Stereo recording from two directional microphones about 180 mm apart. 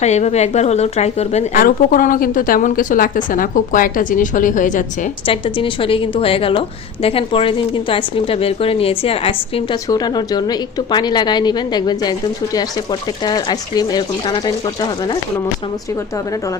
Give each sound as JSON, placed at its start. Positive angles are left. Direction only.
{"t": 0.0, "sound": "a woman's voice", "side_deg": 40}
{"t": 5.2, "sound": "a woman's voice", "side_deg": 30}
{"t": 9.9, "sound": "speech", "side_deg": 20}